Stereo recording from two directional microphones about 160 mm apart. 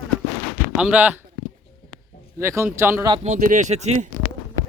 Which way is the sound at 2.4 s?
15° right (ahead or behind).